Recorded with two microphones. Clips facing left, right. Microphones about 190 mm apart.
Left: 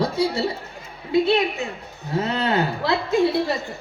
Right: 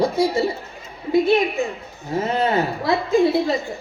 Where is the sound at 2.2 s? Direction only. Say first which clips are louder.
Right 2 dB; 70° left (ahead or behind).